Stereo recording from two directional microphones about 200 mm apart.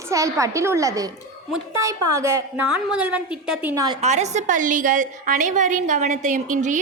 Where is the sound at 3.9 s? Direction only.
35° right (ahead or behind).